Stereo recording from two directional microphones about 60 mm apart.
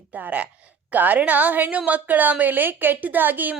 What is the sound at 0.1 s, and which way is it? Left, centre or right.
A woman's voice, right.